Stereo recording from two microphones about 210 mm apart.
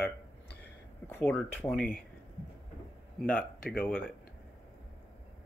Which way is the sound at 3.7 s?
5° left (ahead or behind).